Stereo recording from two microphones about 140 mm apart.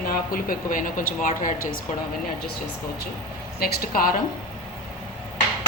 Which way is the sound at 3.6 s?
90° left.